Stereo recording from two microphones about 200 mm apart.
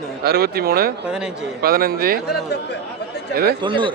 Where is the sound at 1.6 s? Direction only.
50° right (ahead or behind).